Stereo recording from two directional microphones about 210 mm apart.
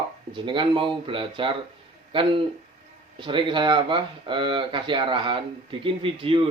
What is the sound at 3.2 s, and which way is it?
Speech, 25° right (ahead or behind).